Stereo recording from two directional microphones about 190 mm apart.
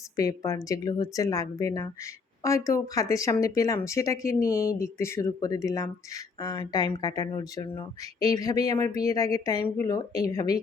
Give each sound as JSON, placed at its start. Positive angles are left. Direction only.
{"t": 0.2, "sound": "speech", "side_deg": 15}